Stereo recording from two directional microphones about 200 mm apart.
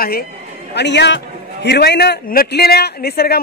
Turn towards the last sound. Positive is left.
turn(degrees=50)  # may be behind; listen again after turning